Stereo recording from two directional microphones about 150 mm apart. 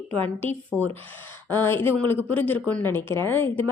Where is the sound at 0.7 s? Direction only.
15° right (ahead or behind).